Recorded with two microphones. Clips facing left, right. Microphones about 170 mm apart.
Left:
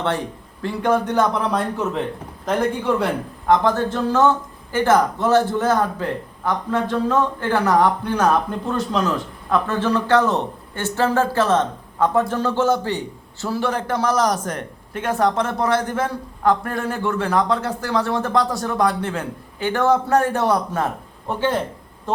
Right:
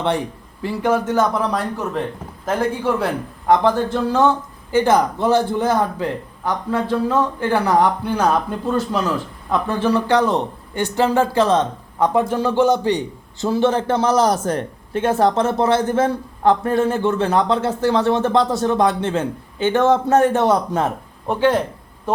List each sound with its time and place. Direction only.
0.6 s a man's voice: 5° right (ahead or behind)